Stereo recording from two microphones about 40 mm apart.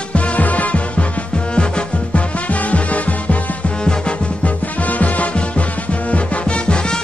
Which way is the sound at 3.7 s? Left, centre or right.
Left.